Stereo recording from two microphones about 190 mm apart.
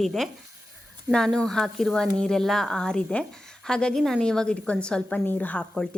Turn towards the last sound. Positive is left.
turn(degrees=5)  # may be behind; listen again after turning